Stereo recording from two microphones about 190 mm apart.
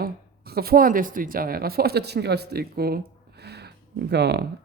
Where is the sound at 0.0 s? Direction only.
55° right (ahead or behind).